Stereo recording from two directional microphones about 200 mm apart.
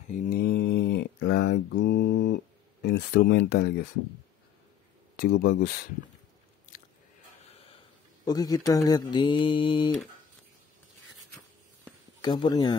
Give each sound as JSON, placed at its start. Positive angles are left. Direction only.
{"t": 0.1, "sound": "mantra", "side_deg": 45}
{"t": 5.1, "sound": "speech", "side_deg": 50}
{"t": 8.3, "sound": "speech", "side_deg": 20}
{"t": 12.2, "sound": "speech", "side_deg": 20}